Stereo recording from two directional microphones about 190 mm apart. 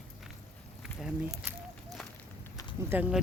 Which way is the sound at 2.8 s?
10° right (ahead or behind).